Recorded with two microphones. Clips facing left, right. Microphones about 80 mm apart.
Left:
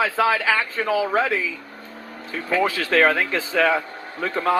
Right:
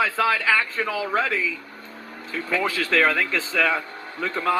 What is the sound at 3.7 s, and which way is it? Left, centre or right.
Speech, left.